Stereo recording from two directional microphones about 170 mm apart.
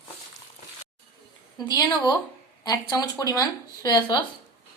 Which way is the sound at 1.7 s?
25° left (ahead or behind).